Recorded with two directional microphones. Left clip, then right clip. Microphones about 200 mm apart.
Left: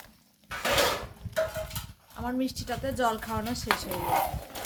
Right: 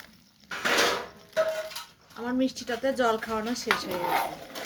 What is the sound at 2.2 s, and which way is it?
A woman's voice, 45° left (ahead or behind).